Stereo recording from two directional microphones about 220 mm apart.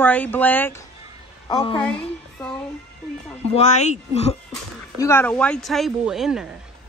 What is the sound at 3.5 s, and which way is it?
Speech, 30° left (ahead or behind).